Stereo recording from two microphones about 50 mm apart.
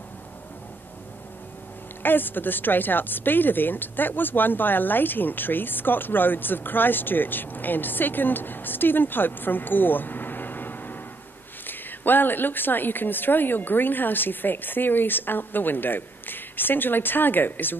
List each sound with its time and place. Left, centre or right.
2.0 s a woman's voice: left